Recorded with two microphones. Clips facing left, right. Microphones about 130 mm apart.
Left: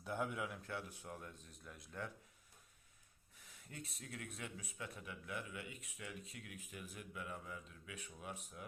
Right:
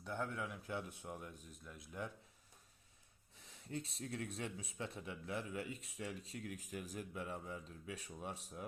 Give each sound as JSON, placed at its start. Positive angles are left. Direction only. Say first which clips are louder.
{"t": 0.0, "sound": "a man's voice", "louder": "left 1 dB", "side_deg": 10}
{"t": 0.7, "sound": "a man's voice", "louder": "right 2 dB", "side_deg": -20}
{"t": 1.5, "sound": "speech", "louder": "right 2 dB", "side_deg": 0}
{"t": 3.3, "sound": "speech", "louder": "right 8 dB", "side_deg": -30}